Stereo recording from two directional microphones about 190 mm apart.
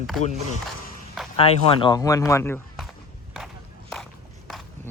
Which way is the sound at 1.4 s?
25° left (ahead or behind).